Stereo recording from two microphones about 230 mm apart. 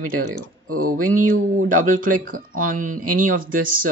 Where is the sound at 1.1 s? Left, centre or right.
Right.